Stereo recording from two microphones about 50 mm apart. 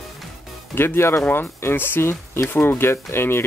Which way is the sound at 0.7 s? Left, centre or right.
Left.